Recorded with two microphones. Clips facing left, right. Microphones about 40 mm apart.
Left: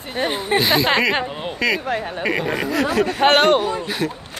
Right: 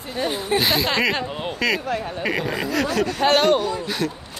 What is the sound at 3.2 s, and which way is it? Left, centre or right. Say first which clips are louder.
Speech: left 3 dB; left.